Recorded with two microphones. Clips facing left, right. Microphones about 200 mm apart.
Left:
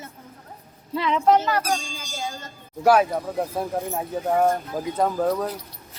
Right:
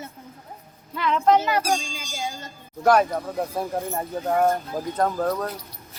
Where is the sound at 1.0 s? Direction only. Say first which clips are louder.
Left 1 dB; 20° left (ahead or behind).